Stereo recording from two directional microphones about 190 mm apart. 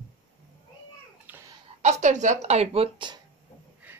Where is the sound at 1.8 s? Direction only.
40° right (ahead or behind).